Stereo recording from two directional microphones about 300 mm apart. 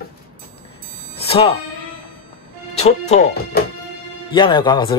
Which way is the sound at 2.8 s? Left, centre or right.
Left.